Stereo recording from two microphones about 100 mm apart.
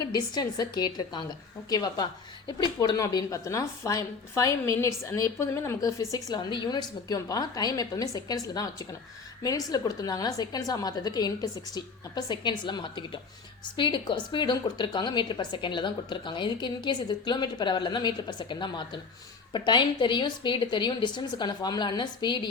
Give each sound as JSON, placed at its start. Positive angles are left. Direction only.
{"t": 0.0, "sound": "a woman's voice", "side_deg": 45}
{"t": 6.3, "sound": "a woman's voice", "side_deg": 50}